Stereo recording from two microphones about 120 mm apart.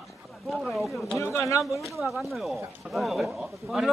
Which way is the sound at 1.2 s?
25° left (ahead or behind).